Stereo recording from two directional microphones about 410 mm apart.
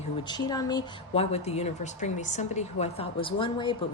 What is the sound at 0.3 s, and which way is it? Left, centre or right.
Speech, centre.